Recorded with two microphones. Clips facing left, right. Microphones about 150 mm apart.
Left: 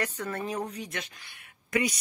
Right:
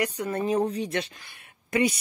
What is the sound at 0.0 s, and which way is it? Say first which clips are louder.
Speech: right 5 dB; 15° right (ahead or behind).